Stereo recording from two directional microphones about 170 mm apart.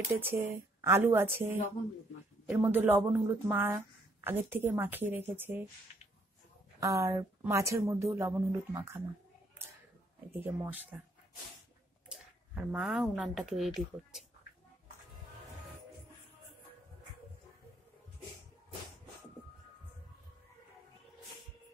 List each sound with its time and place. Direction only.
0.2 s speech: 15° right (ahead or behind)
6.8 s speech: 20° right (ahead or behind)
10.3 s speech: 10° right (ahead or behind)
12.1 s speech: 5° right (ahead or behind)